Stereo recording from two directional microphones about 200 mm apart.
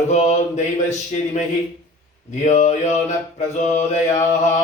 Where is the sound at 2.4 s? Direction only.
35° left (ahead or behind).